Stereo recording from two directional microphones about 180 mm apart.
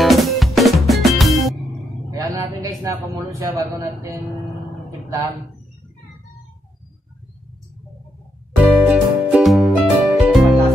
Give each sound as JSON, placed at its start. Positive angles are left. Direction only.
{"t": 0.0, "sound": "music", "side_deg": 0}
{"t": 2.0, "sound": "a sound", "side_deg": -20}
{"t": 8.7, "sound": "music", "side_deg": -5}